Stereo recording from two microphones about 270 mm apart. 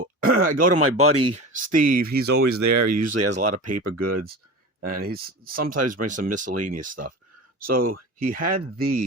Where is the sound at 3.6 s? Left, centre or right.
Right.